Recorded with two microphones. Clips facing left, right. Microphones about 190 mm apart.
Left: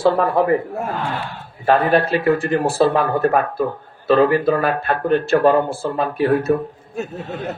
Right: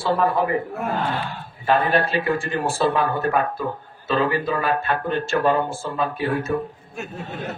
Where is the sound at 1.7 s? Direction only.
40° left (ahead or behind).